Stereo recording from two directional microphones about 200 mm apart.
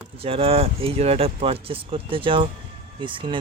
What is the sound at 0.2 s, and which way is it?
Speech, 30° right (ahead or behind).